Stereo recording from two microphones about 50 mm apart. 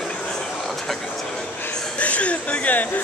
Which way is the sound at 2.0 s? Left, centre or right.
Left.